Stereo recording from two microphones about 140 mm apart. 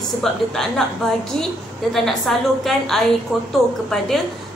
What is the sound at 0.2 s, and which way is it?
Speech, 5° left (ahead or behind).